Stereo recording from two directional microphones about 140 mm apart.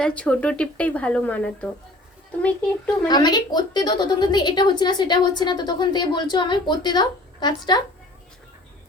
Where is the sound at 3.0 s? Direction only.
30° left (ahead or behind).